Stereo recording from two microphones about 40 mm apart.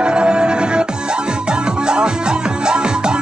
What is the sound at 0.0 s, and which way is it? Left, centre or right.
Music, right.